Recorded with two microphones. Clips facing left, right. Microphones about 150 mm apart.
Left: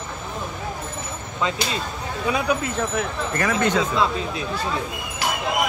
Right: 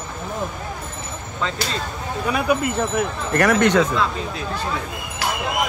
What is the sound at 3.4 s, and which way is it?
Speech, 70° right (ahead or behind).